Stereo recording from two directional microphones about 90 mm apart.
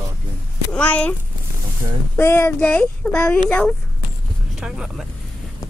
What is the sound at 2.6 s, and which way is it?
Speech, 10° left (ahead or behind).